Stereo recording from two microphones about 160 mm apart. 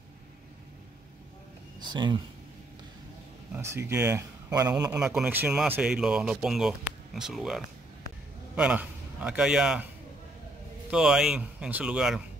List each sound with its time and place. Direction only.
1.8 s speech: 30° right (ahead or behind)
3.5 s speech: 15° right (ahead or behind)
4.9 s a man's voice: 5° right (ahead or behind)
10.9 s speech: 5° right (ahead or behind)